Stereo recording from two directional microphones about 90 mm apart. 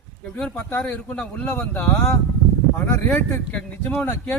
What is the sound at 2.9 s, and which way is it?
Speech, 25° left (ahead or behind).